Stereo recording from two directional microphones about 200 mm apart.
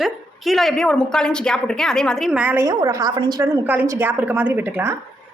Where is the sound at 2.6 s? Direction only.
15° right (ahead or behind).